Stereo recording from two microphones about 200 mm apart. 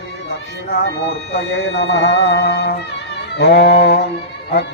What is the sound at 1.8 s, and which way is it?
Music, 60° left (ahead or behind).